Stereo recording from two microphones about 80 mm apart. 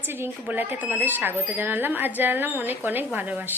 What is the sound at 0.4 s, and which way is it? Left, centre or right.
A woman's voice, right.